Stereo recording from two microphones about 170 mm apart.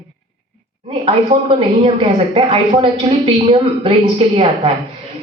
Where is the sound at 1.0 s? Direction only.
30° right (ahead or behind).